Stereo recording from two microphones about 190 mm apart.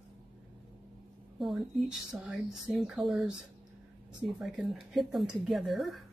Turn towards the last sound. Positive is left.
turn(degrees=0)  # may be behind; listen again after turning